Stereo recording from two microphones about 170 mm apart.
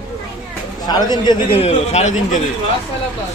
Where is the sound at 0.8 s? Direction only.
25° left (ahead or behind).